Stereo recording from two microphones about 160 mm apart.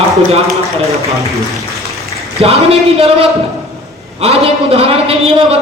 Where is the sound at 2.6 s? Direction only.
40° right (ahead or behind).